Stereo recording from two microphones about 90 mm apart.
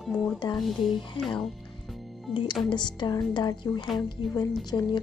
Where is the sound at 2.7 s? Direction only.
60° left (ahead or behind).